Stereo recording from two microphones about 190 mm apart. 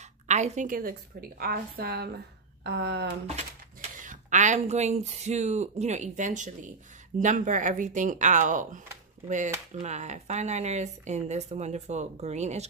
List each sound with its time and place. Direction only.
0.3 s a woman's voice: 40° right (ahead or behind); by 3.1 s 60° right (ahead or behind)
3.8 s a woman's voice: 40° right (ahead or behind)